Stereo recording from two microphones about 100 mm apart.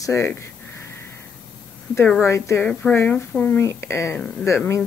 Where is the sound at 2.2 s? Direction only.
30° left (ahead or behind).